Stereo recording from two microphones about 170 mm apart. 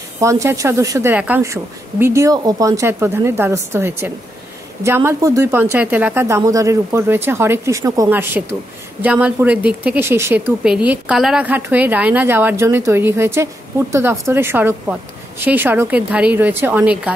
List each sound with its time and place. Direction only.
0.2 s speech: 15° right (ahead or behind)